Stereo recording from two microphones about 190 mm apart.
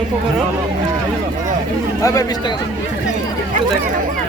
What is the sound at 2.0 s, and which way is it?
Speech, 20° left (ahead or behind).